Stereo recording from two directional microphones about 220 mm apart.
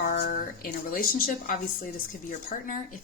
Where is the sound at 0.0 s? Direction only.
40° left (ahead or behind).